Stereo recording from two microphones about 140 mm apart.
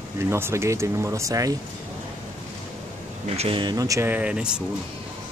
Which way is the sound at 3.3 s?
45° right (ahead or behind).